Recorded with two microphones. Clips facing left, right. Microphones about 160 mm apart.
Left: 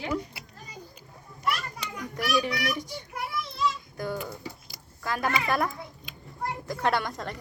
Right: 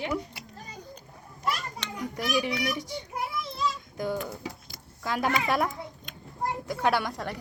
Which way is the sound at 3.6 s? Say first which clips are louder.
Left 2 dB; 15° right (ahead or behind).